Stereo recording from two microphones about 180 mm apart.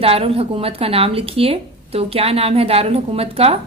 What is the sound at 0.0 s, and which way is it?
Speech, 30° right (ahead or behind).